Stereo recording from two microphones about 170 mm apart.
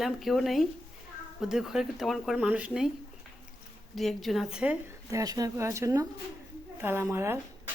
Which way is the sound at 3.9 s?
Centre (ahead or behind).